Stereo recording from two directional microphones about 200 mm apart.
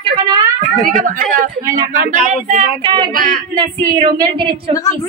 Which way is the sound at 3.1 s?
45° right (ahead or behind).